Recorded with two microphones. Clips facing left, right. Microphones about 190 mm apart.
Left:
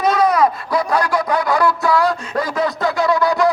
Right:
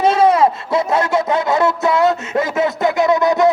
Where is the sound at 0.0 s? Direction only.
25° right (ahead or behind).